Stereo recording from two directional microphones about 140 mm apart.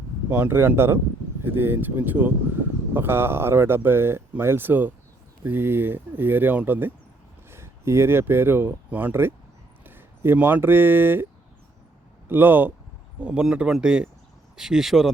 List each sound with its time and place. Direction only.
0.3 s speech: 15° right (ahead or behind)
12.3 s speech: 15° right (ahead or behind)